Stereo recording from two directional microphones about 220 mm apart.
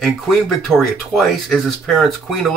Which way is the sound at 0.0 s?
Centre (ahead or behind).